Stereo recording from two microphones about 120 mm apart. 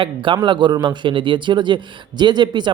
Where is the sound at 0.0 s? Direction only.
45° right (ahead or behind).